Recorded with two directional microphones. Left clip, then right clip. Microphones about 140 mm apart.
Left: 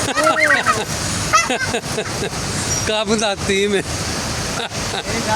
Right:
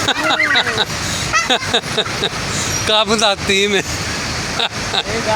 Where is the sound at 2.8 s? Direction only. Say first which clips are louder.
Right 5 dB; 25° left (ahead or behind).